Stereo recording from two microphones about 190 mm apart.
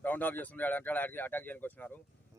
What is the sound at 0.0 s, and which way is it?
Speech, 10° left (ahead or behind).